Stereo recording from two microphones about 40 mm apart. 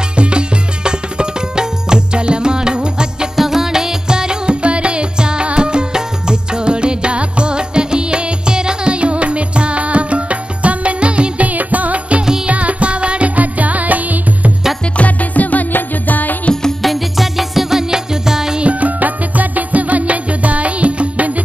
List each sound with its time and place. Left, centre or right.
0.1 s music: right
3.3 s music: centre; by 11.4 s right
11.4 s music: right
13.4 s music: right
15.0 s music: left
16.8 s music: centre
18.6 s music: right